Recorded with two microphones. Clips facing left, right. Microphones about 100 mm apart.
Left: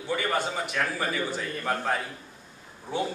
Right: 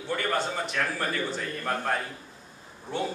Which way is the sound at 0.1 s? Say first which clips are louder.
Left 1 dB; 5° left (ahead or behind).